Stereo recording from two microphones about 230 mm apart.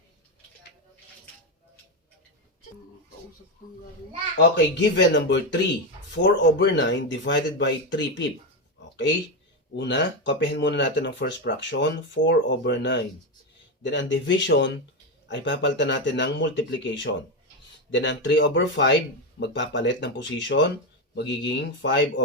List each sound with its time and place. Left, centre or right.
4.5 s speech: left
9.7 s speech: left